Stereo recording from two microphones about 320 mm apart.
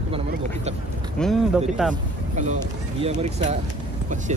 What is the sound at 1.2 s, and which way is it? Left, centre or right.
Speech, centre.